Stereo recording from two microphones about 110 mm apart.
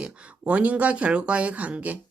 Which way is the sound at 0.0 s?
10° right (ahead or behind).